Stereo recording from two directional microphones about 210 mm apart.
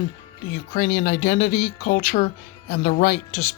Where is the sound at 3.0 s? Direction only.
35° left (ahead or behind).